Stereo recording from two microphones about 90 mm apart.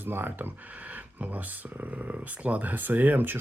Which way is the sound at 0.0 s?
25° right (ahead or behind).